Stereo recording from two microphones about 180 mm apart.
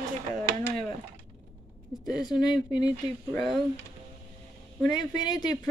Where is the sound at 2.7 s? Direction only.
20° left (ahead or behind).